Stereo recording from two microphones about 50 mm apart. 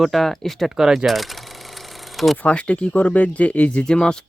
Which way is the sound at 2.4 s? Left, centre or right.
Left.